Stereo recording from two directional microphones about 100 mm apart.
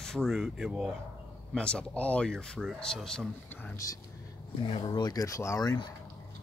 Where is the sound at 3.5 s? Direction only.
20° left (ahead or behind).